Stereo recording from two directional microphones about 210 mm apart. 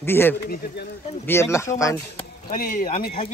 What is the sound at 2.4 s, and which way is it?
Speech, 40° left (ahead or behind).